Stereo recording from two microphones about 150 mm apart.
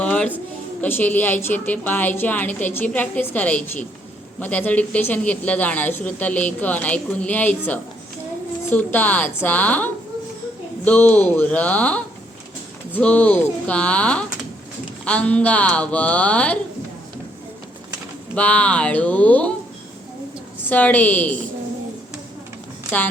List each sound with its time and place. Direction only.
0.0 s music: 10° left (ahead or behind)
0.8 s speech: 10° left (ahead or behind)
18.3 s speech: 10° left (ahead or behind)
20.7 s speech: 10° left (ahead or behind)